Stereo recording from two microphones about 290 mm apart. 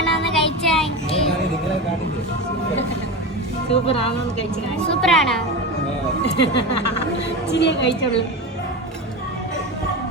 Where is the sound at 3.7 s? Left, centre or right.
Centre.